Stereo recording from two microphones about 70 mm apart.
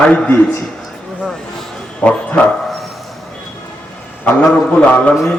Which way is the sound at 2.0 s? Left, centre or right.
Centre.